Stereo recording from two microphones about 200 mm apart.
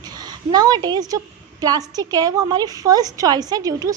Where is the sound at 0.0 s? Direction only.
20° right (ahead or behind).